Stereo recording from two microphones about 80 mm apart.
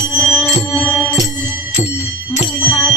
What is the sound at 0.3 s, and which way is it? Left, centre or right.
Music, centre.